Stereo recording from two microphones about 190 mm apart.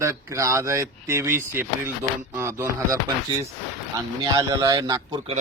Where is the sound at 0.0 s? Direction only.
15° right (ahead or behind).